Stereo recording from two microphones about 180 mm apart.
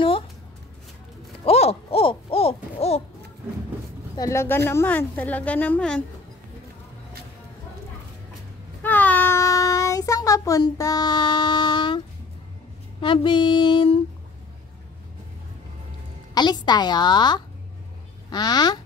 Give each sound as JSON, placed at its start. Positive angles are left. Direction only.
{"t": 1.4, "sound": "hoot", "side_deg": 35}
{"t": 4.2, "sound": "a woman's voice", "side_deg": 15}
{"t": 8.8, "sound": "child singing", "side_deg": 10}
{"t": 13.0, "sound": "a woman's voice", "side_deg": 25}
{"t": 16.3, "sound": "a woman's voice", "side_deg": 25}